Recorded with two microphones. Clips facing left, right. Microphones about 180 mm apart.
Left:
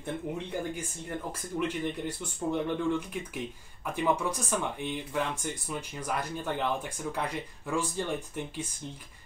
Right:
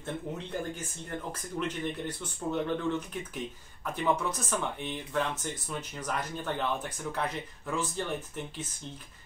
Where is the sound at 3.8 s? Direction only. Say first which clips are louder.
Left 1 dB; 10° left (ahead or behind).